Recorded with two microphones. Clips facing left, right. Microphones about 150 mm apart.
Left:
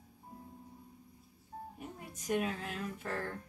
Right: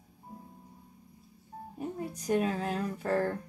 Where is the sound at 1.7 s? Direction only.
35° right (ahead or behind).